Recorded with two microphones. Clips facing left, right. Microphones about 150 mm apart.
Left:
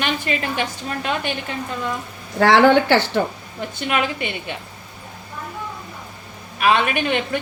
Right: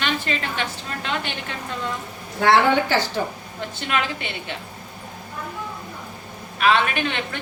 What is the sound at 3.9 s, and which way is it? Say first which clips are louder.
Speech: left 3 dB; 15° left (ahead or behind).